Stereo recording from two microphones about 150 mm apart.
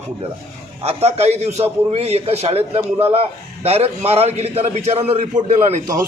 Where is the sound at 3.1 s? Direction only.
40° right (ahead or behind).